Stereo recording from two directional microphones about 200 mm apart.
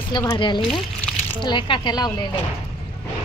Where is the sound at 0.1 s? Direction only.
20° left (ahead or behind).